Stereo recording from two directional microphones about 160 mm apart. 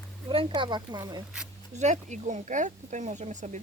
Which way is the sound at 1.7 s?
45° right (ahead or behind).